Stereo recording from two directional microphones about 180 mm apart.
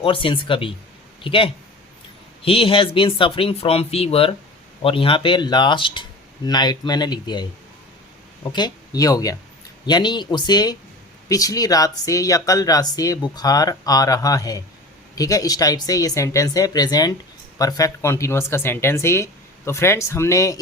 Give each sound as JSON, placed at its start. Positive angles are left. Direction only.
{"t": 0.0, "sound": "speech", "side_deg": 30}
{"t": 8.4, "sound": "speech", "side_deg": 25}